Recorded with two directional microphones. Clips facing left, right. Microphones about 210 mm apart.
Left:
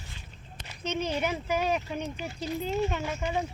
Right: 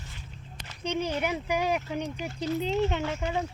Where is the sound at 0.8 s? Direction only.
15° right (ahead or behind).